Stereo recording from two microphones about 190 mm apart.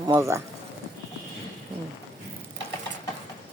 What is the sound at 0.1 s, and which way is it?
Speech, 15° right (ahead or behind).